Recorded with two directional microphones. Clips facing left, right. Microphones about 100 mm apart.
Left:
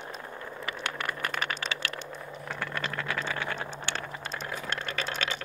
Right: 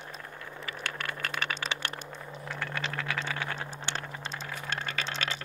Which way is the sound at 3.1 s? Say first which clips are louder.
Left 2 dB; centre (ahead or behind).